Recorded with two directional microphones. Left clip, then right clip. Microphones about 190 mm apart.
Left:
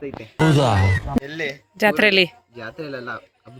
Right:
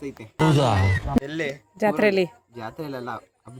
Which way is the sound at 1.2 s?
75° right (ahead or behind).